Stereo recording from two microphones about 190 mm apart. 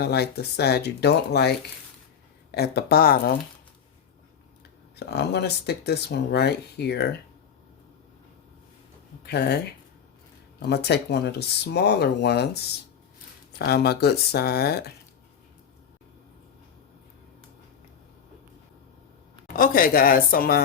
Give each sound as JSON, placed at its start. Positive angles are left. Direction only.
{"t": 0.0, "sound": "speech", "side_deg": 60}
{"t": 4.9, "sound": "speech", "side_deg": 60}
{"t": 9.2, "sound": "speech", "side_deg": 60}
{"t": 10.6, "sound": "speech", "side_deg": 60}
{"t": 13.7, "sound": "speech", "side_deg": 55}
{"t": 19.5, "sound": "speech", "side_deg": 50}